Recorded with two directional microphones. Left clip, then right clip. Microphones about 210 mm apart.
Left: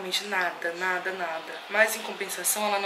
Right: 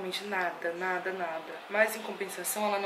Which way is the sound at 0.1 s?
10° right (ahead or behind).